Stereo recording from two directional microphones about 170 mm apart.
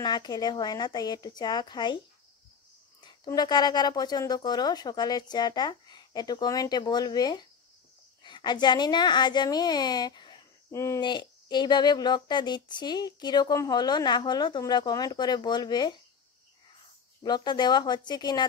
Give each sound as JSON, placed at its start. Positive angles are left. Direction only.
{"t": 0.0, "sound": "speech", "side_deg": 25}
{"t": 3.0, "sound": "speech", "side_deg": 25}
{"t": 17.2, "sound": "speech", "side_deg": 25}